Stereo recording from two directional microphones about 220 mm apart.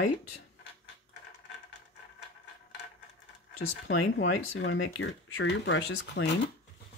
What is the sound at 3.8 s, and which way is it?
Speech, 60° left (ahead or behind).